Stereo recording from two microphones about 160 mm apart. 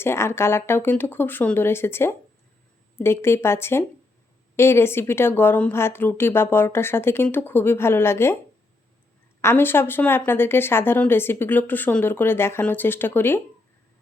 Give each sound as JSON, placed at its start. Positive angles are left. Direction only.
{"t": 0.0, "sound": "speech", "side_deg": 15}
{"t": 9.4, "sound": "speech", "side_deg": 15}